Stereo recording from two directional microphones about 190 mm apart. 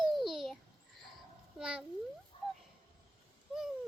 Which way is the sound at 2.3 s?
25° left (ahead or behind).